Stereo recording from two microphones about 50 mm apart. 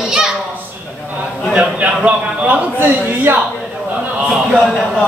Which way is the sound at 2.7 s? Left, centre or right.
Right.